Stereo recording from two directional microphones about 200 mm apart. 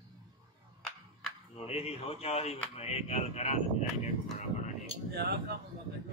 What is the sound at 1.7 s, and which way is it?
Speech, 30° left (ahead or behind).